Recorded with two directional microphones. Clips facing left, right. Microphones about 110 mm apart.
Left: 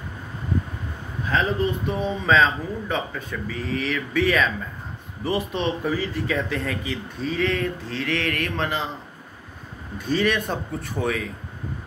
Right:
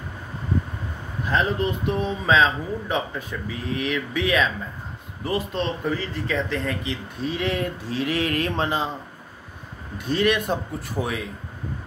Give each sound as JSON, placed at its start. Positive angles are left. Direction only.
{"t": 1.3, "sound": "a man's voice", "side_deg": 0}
{"t": 10.0, "sound": "speech", "side_deg": -5}